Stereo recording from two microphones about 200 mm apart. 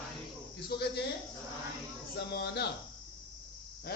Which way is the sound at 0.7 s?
50° left (ahead or behind).